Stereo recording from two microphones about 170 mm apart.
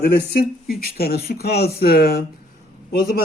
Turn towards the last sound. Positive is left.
turn(degrees=60)  # may be behind; listen again after turning